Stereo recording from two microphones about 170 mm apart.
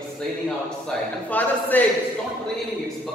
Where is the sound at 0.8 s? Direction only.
10° left (ahead or behind).